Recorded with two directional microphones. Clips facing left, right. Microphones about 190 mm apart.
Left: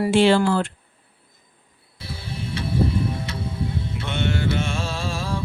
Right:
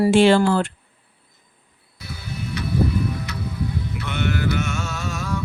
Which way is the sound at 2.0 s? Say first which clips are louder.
Even; 30° left (ahead or behind).